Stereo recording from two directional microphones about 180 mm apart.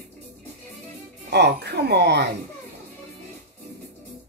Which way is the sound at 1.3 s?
65° right (ahead or behind).